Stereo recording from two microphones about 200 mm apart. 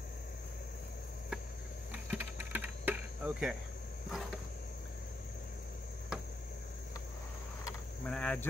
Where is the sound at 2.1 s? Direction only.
10° right (ahead or behind).